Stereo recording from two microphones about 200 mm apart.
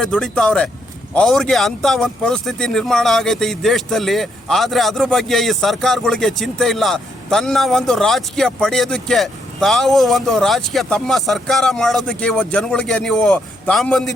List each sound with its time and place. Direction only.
0.0 s speech: 5° left (ahead or behind)